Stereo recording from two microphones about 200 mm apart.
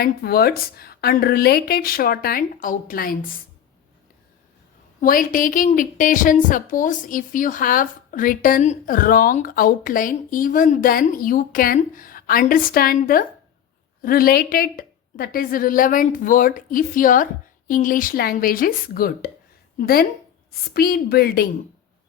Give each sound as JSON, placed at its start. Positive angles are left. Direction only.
{"t": 0.0, "sound": "a woman's voice", "side_deg": 50}
{"t": 4.9, "sound": "a woman's voice", "side_deg": 45}